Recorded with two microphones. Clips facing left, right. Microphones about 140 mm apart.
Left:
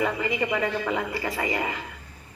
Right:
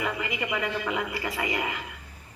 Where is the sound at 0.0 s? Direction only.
35° left (ahead or behind).